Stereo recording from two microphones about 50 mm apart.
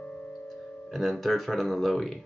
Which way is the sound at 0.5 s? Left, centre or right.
Centre.